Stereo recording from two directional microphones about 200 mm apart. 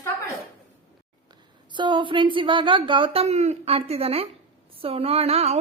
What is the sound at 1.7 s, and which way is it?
A woman's voice, 25° right (ahead or behind).